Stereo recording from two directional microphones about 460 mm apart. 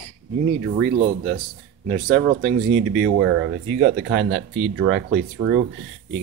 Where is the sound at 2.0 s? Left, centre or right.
Right.